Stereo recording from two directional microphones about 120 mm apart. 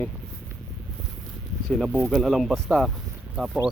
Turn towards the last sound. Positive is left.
turn(degrees=-5)  # may be behind; listen again after turning